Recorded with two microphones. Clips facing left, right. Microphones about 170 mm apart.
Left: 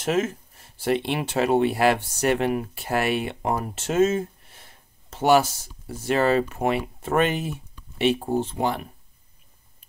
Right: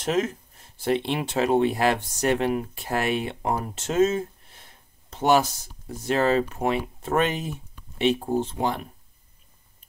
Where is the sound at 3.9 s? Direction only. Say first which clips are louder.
Left 1 dB; 55° left (ahead or behind).